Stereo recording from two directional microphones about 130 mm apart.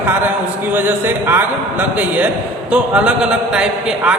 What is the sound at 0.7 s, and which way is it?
A man's voice, 15° right (ahead or behind).